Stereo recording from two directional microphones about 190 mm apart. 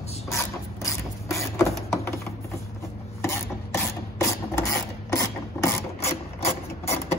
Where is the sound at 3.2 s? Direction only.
15° left (ahead or behind).